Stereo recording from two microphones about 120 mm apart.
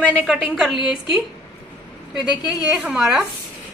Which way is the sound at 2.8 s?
5° right (ahead or behind).